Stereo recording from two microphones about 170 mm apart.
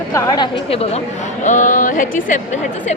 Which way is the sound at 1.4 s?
50° left (ahead or behind).